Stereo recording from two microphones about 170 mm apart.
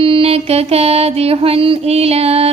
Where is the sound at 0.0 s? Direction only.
35° right (ahead or behind).